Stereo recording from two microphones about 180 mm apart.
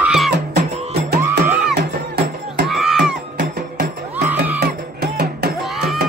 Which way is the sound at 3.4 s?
50° right (ahead or behind).